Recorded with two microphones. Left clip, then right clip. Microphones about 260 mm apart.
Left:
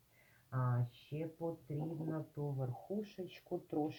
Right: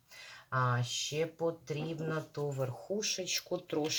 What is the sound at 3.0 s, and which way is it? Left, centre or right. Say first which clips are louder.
Speech: right 12 dB; right.